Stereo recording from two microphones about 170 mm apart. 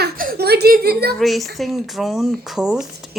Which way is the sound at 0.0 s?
60° right (ahead or behind).